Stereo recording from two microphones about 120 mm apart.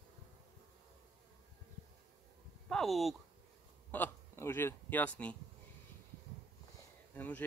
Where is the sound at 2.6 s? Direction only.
5° left (ahead or behind).